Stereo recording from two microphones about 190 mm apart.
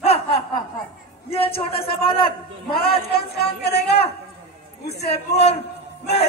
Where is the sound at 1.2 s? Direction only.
30° left (ahead or behind).